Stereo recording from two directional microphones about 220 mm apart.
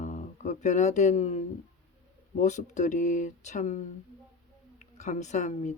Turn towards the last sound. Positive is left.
turn(degrees=30)  # may be behind; listen again after turning